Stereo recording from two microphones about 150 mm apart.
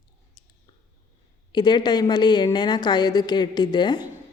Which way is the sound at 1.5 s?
30° left (ahead or behind).